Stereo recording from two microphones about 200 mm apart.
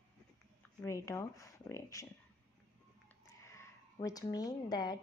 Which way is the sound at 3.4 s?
15° left (ahead or behind).